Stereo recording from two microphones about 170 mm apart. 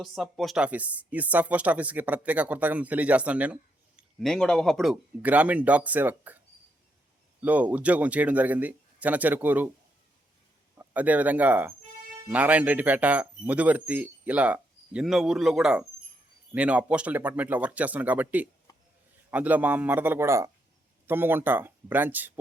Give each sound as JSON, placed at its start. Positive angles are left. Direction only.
{"t": 0.0, "sound": "speech", "side_deg": 0}
{"t": 7.4, "sound": "speech", "side_deg": -10}
{"t": 10.8, "sound": "speech", "side_deg": -10}
{"t": 18.7, "sound": "a sound", "side_deg": 20}
{"t": 19.3, "sound": "speech", "side_deg": -10}